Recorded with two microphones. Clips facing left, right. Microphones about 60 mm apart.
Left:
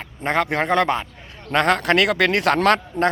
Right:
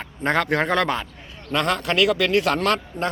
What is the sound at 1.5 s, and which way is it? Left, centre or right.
A man's voice, left.